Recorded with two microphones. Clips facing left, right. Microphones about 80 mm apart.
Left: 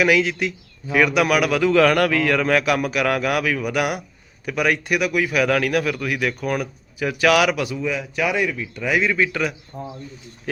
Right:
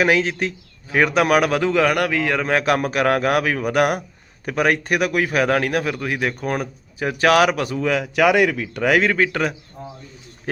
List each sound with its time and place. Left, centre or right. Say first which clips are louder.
0.0 s a man's voice: even; right
1.7 s a man's voice: left 2 dB; centre; by 7.8 s right
7.8 s speech: right 5 dB; right